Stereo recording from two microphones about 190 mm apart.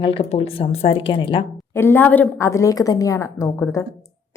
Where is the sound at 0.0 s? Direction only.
30° left (ahead or behind).